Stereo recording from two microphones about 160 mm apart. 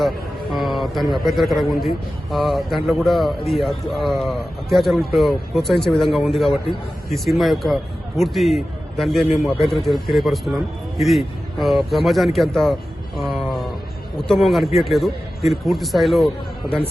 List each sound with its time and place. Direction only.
0.5 s speech: centre (ahead or behind)
13.1 s a sound: centre (ahead or behind)
14.3 s speech: centre (ahead or behind)